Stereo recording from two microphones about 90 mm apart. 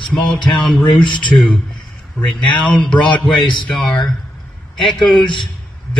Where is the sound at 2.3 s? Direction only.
15° left (ahead or behind).